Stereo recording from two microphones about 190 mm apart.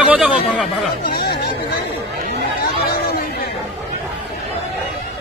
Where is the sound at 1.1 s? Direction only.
55° left (ahead or behind).